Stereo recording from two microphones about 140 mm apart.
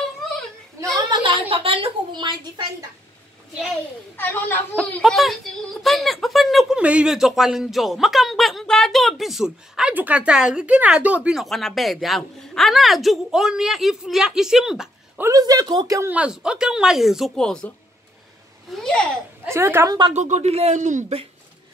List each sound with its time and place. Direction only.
0.9 s a woman's voice: 35° right (ahead or behind)
4.2 s a woman's voice: 15° left (ahead or behind)
5.0 s speech: centre (ahead or behind)
15.1 s speech: 25° right (ahead or behind)
16.1 s speech: 5° right (ahead or behind)
19.4 s speech: 20° right (ahead or behind)
20.2 s speech: 55° right (ahead or behind)